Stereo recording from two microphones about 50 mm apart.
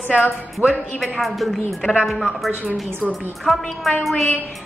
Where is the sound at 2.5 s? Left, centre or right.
Right.